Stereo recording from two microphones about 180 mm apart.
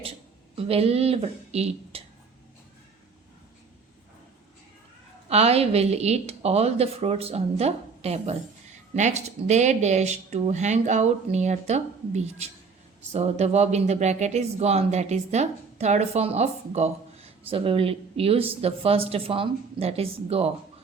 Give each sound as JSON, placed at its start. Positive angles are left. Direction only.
{"t": 0.0, "sound": "speech", "side_deg": -30}
{"t": 5.3, "sound": "speech", "side_deg": -35}